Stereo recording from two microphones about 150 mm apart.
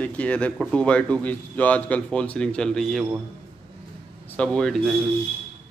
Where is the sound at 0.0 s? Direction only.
10° left (ahead or behind).